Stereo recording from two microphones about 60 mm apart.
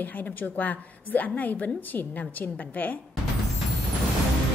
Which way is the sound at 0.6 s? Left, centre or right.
Left.